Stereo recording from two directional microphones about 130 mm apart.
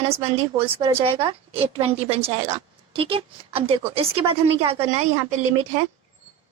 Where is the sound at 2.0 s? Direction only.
50° right (ahead or behind).